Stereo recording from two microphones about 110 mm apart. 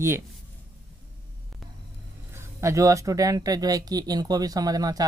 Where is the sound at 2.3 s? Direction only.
25° right (ahead or behind).